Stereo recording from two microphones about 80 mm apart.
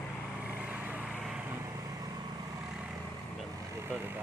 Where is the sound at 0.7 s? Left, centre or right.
Centre.